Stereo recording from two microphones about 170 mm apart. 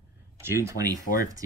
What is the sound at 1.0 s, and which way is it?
Speech, 55° left (ahead or behind).